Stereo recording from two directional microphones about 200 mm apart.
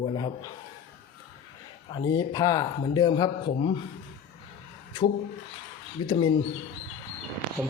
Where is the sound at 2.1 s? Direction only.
20° left (ahead or behind).